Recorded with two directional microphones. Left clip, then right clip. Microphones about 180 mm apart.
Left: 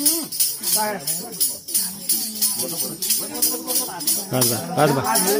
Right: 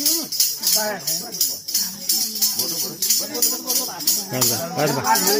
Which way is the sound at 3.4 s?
15° right (ahead or behind).